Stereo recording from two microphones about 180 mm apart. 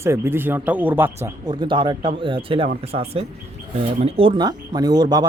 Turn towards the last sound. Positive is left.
turn(degrees=-20)  # may be behind; listen again after turning